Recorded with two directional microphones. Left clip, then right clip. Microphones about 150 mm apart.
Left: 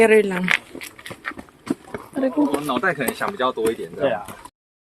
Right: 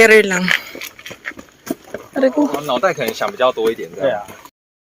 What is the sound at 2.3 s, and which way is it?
Speech, 50° right (ahead or behind).